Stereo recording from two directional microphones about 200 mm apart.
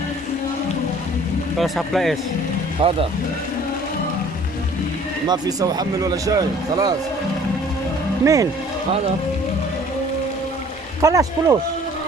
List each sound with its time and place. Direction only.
1.5 s speech: centre (ahead or behind)
2.8 s a man's voice: 25° right (ahead or behind)
5.3 s a man's voice: 20° right (ahead or behind)
8.2 s speech: 15° right (ahead or behind)
11.0 s speech: 15° right (ahead or behind)